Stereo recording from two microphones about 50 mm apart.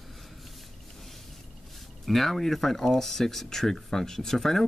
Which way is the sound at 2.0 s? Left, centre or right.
Centre.